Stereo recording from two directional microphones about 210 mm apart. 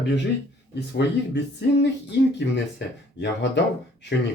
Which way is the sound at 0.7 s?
55° left (ahead or behind).